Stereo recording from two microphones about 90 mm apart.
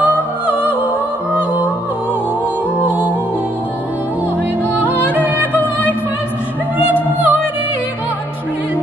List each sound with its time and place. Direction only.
0.0 s music: 15° right (ahead or behind)
2.8 s music: 15° right (ahead or behind)
5.1 s music: 20° right (ahead or behind)
5.6 s music: 20° left (ahead or behind)
6.9 s music: 20° right (ahead or behind)